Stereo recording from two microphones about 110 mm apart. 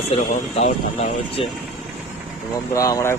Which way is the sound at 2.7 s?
30° left (ahead or behind).